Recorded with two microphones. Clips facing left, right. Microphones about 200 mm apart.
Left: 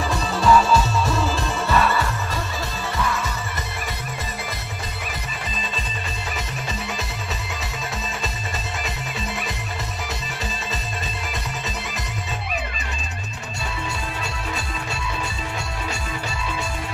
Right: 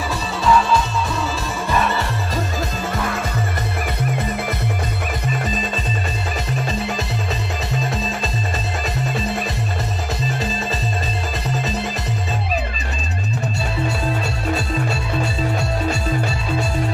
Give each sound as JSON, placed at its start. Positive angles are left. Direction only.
{"t": 0.4, "sound": "music", "side_deg": 0}
{"t": 1.7, "sound": "music", "side_deg": -20}
{"t": 3.0, "sound": "music", "side_deg": -55}